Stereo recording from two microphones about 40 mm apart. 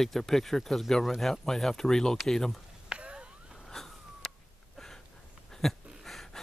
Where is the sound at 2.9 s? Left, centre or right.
Right.